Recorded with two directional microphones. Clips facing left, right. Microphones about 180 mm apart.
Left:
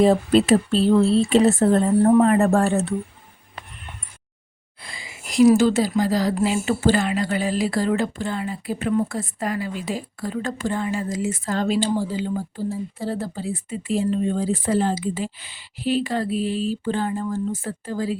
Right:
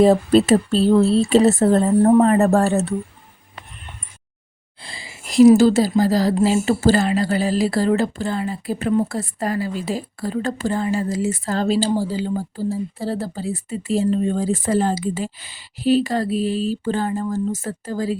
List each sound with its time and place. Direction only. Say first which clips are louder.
0.0 s speech: right 3 dB; 40° right (ahead or behind)
4.8 s a sound: right 1 dB; 30° right (ahead or behind)
6.0 s speech: right 3 dB; 35° right (ahead or behind)